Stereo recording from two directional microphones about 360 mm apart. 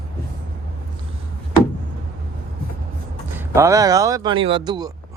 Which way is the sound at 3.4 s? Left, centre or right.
Centre.